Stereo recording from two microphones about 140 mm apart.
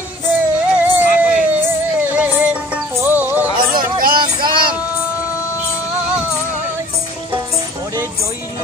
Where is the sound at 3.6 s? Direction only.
90° right.